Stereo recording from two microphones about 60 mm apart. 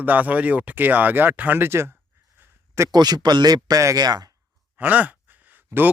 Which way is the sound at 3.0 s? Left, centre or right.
Right.